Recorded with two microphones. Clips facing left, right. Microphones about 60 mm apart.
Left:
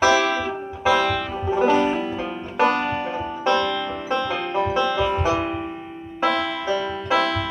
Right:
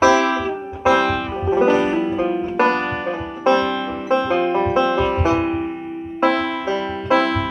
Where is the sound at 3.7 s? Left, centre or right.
Right.